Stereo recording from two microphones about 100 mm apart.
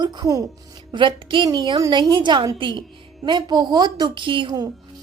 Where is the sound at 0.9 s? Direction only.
55° right (ahead or behind).